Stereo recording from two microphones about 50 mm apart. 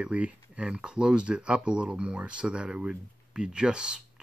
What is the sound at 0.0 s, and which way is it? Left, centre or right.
Speech, right.